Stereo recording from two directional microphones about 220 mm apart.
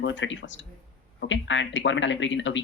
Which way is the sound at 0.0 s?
55° left (ahead or behind).